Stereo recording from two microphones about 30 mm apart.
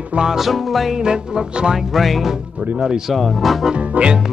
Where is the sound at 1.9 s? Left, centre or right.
Centre.